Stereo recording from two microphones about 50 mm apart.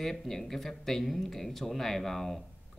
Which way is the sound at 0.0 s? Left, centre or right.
Centre.